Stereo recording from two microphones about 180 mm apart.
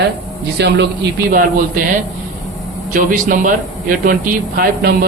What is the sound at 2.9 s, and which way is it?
Speech, 50° right (ahead or behind).